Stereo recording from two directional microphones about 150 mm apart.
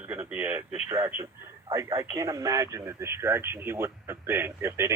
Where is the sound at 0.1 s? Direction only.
10° right (ahead or behind).